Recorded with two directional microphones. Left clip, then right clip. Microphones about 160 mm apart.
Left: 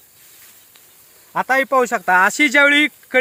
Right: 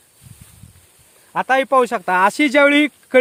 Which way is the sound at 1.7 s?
45° right (ahead or behind).